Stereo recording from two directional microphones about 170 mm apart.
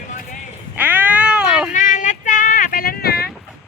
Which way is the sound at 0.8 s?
10° right (ahead or behind).